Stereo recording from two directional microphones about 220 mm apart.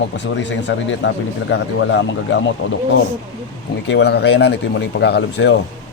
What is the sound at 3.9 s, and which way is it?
Speech, 50° left (ahead or behind).